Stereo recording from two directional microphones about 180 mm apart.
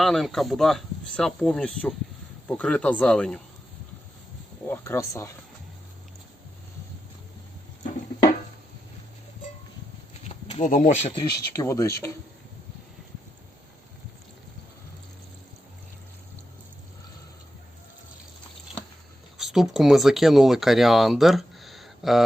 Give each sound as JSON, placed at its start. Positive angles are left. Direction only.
{"t": 0.0, "sound": "speech", "side_deg": 0}
{"t": 4.7, "sound": "speech", "side_deg": 15}
{"t": 10.2, "sound": "a sound", "side_deg": 35}
{"t": 10.7, "sound": "speech", "side_deg": 45}
{"t": 11.1, "sound": "speech", "side_deg": 20}
{"t": 19.4, "sound": "speech", "side_deg": 0}